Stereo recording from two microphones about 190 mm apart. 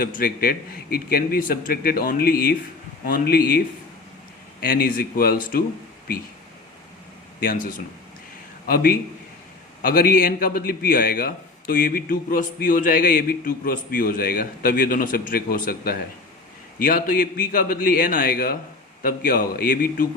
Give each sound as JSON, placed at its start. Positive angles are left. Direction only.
{"t": 0.0, "sound": "a man's voice", "side_deg": 50}
{"t": 4.6, "sound": "a man's voice", "side_deg": 50}
{"t": 7.3, "sound": "a man's voice", "side_deg": 45}